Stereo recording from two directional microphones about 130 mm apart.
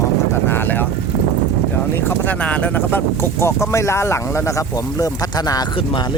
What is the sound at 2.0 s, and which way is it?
Speech, 15° left (ahead or behind).